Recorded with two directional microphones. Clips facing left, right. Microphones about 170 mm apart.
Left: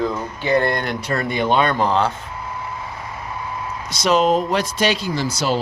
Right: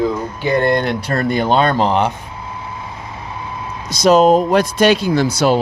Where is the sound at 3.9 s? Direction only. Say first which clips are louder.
Right 6 dB; 45° right (ahead or behind); by 5.6 s 60° right (ahead or behind).